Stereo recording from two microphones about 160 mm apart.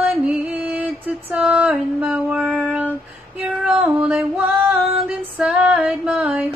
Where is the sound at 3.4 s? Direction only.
5° right (ahead or behind).